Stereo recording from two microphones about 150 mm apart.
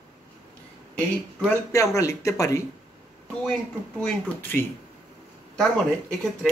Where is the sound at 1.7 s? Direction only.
20° left (ahead or behind).